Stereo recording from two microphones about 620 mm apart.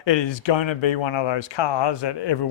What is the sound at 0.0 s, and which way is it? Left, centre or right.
Speech, left.